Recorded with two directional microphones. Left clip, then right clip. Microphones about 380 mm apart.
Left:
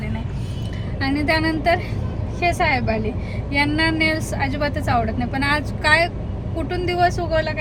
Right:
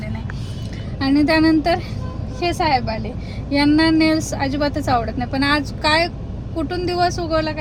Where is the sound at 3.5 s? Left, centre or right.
Centre.